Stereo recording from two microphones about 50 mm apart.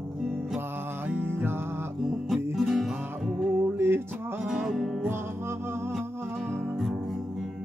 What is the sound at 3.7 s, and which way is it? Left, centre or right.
Music, right.